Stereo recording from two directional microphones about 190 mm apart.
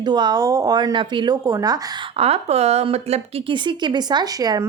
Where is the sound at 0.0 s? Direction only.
20° right (ahead or behind).